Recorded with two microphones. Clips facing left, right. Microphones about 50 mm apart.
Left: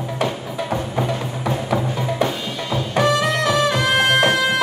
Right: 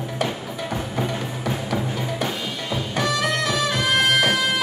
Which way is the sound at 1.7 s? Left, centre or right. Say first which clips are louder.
Left 4 dB; centre.